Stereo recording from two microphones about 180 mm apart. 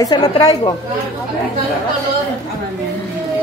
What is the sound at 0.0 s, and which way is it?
Speech, 25° left (ahead or behind).